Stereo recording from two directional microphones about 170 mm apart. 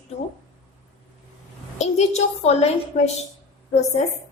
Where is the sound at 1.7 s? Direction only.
40° left (ahead or behind).